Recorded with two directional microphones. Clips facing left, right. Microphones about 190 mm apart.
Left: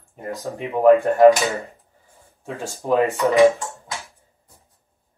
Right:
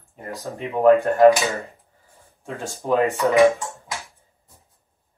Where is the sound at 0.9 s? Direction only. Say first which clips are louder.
Left 3 dB; 15° left (ahead or behind).